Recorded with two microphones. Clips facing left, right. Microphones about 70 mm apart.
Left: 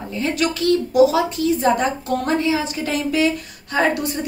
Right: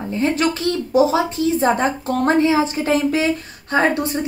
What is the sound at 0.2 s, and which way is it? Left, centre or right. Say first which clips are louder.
A woman's voice: right 2 dB; right.